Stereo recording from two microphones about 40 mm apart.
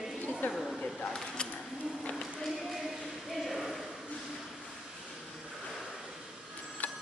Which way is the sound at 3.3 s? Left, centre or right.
Centre.